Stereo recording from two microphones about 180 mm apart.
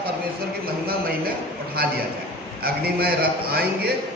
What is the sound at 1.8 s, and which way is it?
A man's voice, 60° right (ahead or behind).